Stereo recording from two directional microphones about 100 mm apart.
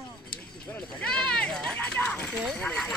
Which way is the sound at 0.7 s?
10° left (ahead or behind).